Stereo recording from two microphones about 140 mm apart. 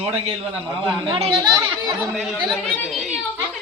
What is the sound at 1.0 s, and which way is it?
Speech, 35° right (ahead or behind).